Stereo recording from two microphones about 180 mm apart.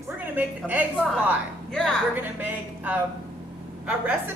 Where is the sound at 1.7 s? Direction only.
5° left (ahead or behind).